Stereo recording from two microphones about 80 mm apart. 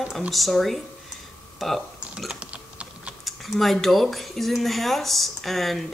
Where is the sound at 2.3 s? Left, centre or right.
Centre.